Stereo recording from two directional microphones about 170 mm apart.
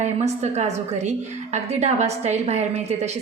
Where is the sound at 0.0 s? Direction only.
40° right (ahead or behind).